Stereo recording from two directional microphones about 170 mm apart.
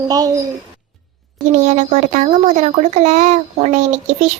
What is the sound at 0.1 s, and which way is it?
Speech, 20° right (ahead or behind).